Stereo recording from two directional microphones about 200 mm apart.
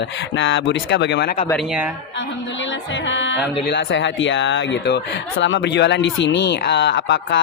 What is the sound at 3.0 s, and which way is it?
Speech, 65° left (ahead or behind).